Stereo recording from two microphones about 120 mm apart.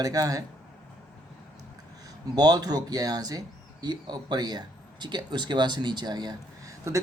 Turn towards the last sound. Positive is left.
turn(degrees=-30)  # may be behind; listen again after turning